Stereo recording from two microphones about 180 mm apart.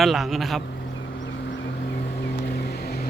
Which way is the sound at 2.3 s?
60° left (ahead or behind).